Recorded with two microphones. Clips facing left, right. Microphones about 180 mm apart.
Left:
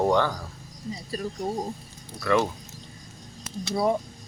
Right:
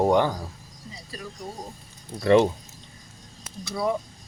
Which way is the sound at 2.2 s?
25° right (ahead or behind).